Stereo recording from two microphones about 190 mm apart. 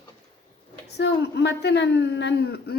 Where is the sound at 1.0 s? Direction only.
65° left (ahead or behind).